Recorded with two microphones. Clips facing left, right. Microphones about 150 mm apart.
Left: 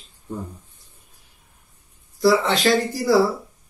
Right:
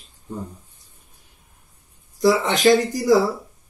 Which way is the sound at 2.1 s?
20° right (ahead or behind).